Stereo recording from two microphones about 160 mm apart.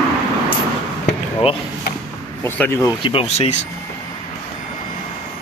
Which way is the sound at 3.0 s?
35° left (ahead or behind).